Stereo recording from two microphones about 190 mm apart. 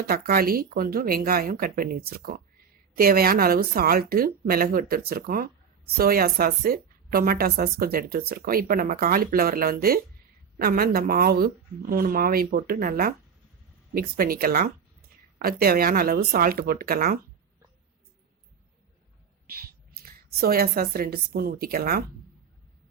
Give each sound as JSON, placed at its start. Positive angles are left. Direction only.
{"t": 0.1, "sound": "a woman's voice", "side_deg": -50}
{"t": 19.5, "sound": "a woman's voice", "side_deg": -55}